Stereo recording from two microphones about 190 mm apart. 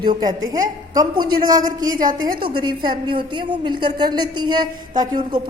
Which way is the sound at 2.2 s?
25° right (ahead or behind).